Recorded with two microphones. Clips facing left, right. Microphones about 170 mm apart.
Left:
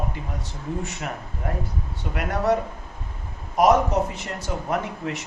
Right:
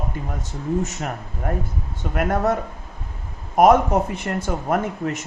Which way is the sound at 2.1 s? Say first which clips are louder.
Right 2 dB; 50° right (ahead or behind).